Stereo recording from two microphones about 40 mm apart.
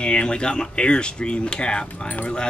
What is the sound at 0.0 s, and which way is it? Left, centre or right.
Speech, left.